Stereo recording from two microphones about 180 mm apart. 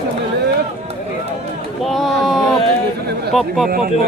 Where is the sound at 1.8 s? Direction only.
Centre (ahead or behind).